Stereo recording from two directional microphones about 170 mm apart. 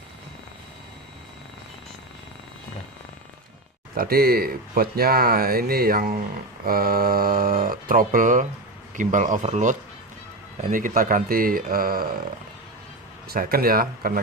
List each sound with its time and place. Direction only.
3.9 s speech: 60° right (ahead or behind)
13.2 s speech: 60° right (ahead or behind)